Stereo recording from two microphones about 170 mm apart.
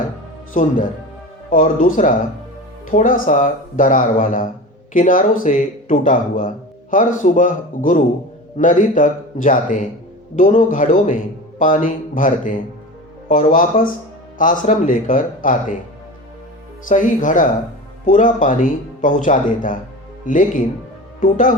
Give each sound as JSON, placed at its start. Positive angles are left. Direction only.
{"t": 1.5, "sound": "speech", "side_deg": 50}
{"t": 16.9, "sound": "speech", "side_deg": 50}